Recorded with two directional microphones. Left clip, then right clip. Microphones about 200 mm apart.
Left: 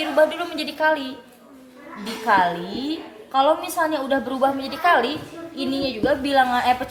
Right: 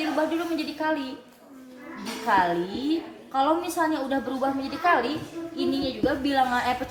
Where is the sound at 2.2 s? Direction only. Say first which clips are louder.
Left 4 dB; 35° left (ahead or behind).